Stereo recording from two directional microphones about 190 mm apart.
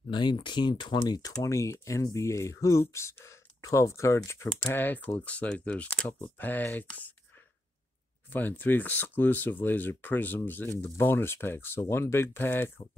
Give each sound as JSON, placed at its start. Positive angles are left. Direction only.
{"t": 0.1, "sound": "speech", "side_deg": 25}